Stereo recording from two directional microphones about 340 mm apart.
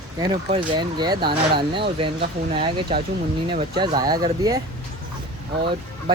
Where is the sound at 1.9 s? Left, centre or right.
Centre.